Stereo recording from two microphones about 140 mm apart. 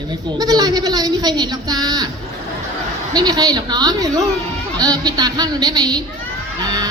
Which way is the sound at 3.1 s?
30° right (ahead or behind).